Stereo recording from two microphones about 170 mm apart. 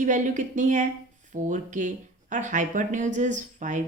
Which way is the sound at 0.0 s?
45° right (ahead or behind).